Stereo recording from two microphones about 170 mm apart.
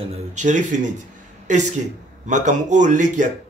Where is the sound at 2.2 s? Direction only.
45° right (ahead or behind).